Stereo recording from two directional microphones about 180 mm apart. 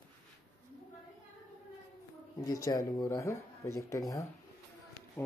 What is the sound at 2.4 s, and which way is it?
Speech, 20° left (ahead or behind).